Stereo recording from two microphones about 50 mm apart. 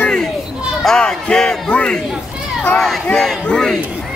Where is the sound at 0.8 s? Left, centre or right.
Centre.